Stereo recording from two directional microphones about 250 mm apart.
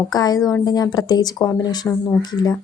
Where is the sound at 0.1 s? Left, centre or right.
Centre.